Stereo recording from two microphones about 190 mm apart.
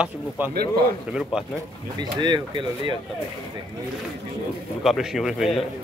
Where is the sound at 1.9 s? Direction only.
25° right (ahead or behind).